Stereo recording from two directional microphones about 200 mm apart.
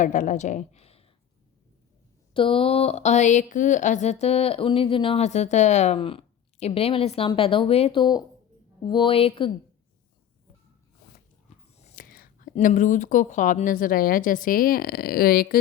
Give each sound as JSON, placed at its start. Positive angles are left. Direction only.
{"t": 0.0, "sound": "a woman's voice", "side_deg": 40}
{"t": 2.3, "sound": "speech", "side_deg": 25}
{"t": 11.7, "sound": "speech", "side_deg": 35}